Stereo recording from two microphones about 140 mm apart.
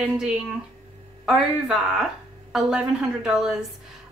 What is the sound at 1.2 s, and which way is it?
A woman's voice, 5° right (ahead or behind).